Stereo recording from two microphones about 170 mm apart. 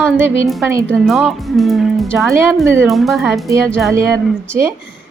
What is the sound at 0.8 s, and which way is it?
Speech, centre (ahead or behind).